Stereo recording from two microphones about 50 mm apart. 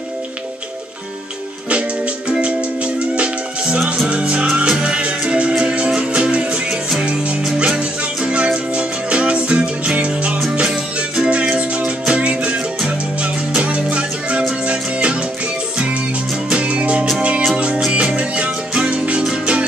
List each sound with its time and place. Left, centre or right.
1.7 s music: right
4.1 s music: right
16.4 s music: right